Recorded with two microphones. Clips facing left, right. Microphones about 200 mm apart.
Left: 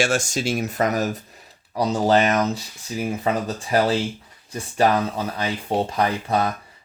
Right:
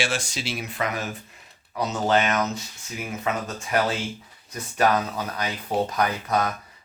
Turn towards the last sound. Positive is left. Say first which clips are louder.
# left 3 dB
turn(degrees=30)  # may be behind; listen again after turning